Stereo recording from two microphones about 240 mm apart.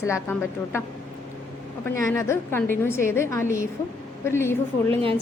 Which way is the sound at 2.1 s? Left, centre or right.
Centre.